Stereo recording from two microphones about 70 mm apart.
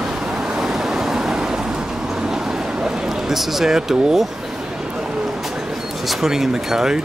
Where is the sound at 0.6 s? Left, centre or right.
Centre.